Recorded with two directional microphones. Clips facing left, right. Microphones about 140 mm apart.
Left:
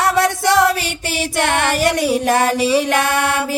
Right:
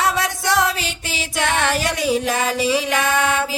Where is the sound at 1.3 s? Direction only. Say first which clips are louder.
Left 2 dB; 60° left (ahead or behind).